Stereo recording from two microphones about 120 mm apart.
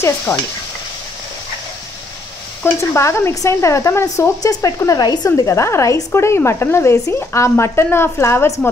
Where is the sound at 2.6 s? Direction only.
20° left (ahead or behind).